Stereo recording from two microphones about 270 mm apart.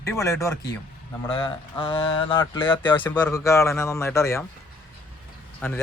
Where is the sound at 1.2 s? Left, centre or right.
Centre.